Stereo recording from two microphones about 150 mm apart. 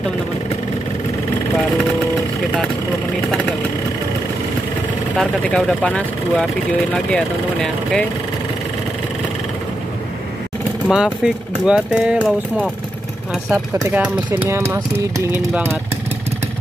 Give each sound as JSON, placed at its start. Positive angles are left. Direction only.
{"t": 5.1, "sound": "speech", "side_deg": 5}
{"t": 10.9, "sound": "speech", "side_deg": -5}
{"t": 13.5, "sound": "speech", "side_deg": -15}